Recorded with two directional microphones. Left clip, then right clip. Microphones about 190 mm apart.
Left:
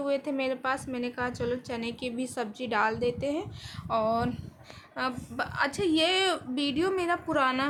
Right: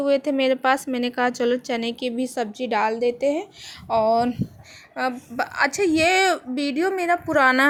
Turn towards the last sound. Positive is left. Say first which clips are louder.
# right 9 dB
turn(degrees=-25)  # may be behind; listen again after turning